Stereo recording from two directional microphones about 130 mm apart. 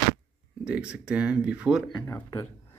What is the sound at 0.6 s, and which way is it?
Speech, 10° right (ahead or behind).